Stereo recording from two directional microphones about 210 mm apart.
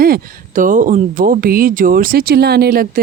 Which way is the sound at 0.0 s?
45° right (ahead or behind).